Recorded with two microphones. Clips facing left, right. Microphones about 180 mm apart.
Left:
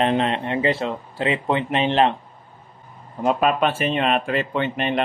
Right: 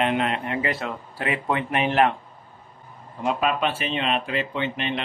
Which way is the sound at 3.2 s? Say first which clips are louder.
Left 4 dB; 45° left (ahead or behind).